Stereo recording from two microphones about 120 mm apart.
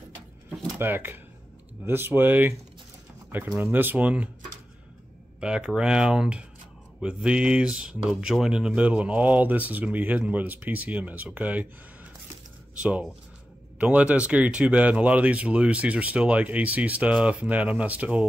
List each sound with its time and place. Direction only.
0.7 s speech: 15° right (ahead or behind)
5.4 s speech: 5° right (ahead or behind)